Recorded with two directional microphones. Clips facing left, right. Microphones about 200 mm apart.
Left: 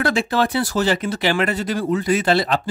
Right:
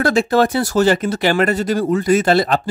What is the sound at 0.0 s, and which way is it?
Speech, 45° right (ahead or behind).